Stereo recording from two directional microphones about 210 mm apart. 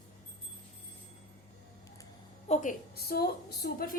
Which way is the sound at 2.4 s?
35° left (ahead or behind).